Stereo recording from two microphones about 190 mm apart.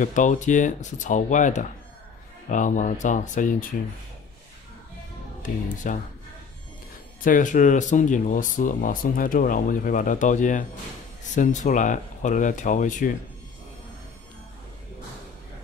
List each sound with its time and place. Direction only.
0.0 s speech: 40° left (ahead or behind)
5.4 s speech: 45° left (ahead or behind)
7.2 s speech: 45° left (ahead or behind)